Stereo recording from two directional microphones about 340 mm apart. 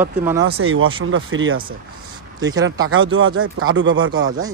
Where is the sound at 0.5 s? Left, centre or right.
Right.